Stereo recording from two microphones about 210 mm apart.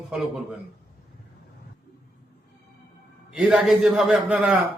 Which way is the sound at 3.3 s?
5° right (ahead or behind).